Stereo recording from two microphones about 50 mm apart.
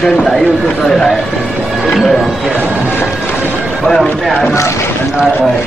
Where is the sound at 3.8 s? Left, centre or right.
Centre.